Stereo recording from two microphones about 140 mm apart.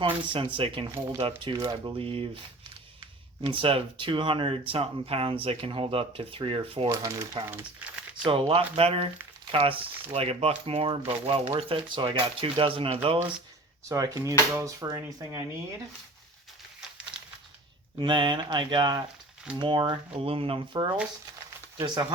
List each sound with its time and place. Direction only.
0.0 s speech: 35° right (ahead or behind)
1.5 s speech: 25° right (ahead or behind)
2.0 s speech: 40° right (ahead or behind)
3.4 s speech: 40° right (ahead or behind)
6.8 s speech: 25° right (ahead or behind)
7.4 s speech: 40° right (ahead or behind)
13.8 s speech: 25° right (ahead or behind)
18.0 s speech: 35° right (ahead or behind)
21.8 s speech: 30° right (ahead or behind)